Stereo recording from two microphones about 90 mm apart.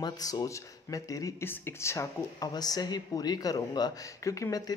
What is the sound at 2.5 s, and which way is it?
Speech, 45° left (ahead or behind).